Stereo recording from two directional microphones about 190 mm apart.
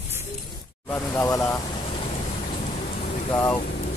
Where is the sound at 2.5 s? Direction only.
40° left (ahead or behind).